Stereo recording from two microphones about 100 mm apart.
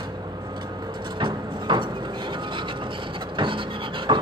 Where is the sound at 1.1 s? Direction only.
50° right (ahead or behind).